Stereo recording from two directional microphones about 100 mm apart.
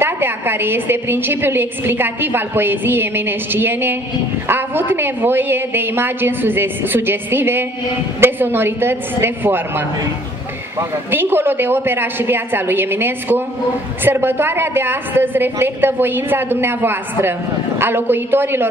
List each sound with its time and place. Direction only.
0.0 s a woman's voice: 20° right (ahead or behind)